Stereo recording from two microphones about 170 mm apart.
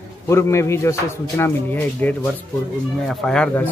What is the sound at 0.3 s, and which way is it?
Speech, 15° left (ahead or behind).